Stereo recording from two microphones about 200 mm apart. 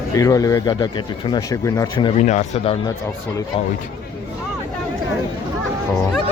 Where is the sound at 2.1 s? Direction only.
35° left (ahead or behind).